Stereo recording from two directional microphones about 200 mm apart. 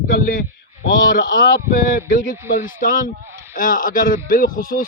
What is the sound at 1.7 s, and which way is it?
Speech, 45° left (ahead or behind).